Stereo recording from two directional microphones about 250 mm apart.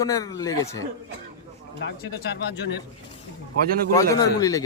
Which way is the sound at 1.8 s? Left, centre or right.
Left.